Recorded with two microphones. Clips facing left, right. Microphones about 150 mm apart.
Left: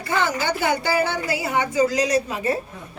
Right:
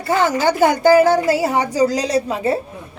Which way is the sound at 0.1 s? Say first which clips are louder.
Right 6 dB; 40° right (ahead or behind).